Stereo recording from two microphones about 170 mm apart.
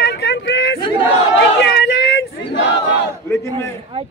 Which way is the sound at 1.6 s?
90° left.